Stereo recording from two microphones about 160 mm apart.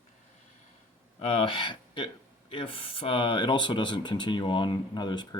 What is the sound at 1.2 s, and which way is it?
Speech, 35° left (ahead or behind).